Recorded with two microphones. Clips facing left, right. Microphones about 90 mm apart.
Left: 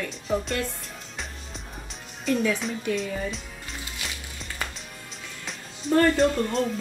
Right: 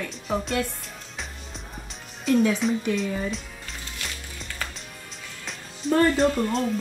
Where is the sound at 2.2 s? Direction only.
Centre (ahead or behind).